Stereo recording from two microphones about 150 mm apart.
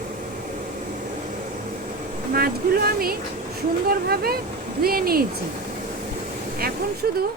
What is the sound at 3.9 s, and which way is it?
Speech, 90° right.